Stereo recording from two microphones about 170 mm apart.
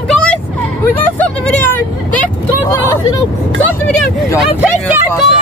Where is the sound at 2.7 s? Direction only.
15° left (ahead or behind).